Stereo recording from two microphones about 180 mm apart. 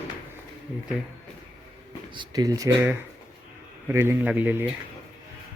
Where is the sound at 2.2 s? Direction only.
20° right (ahead or behind).